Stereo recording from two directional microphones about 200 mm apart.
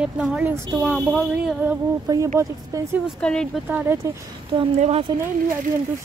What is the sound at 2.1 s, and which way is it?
Speech, 20° right (ahead or behind).